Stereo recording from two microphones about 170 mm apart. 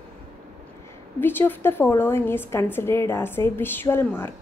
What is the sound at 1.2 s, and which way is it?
A woman's voice, 10° left (ahead or behind).